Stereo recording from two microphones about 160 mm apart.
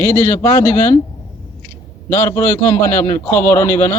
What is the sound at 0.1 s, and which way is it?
Speech, 10° left (ahead or behind).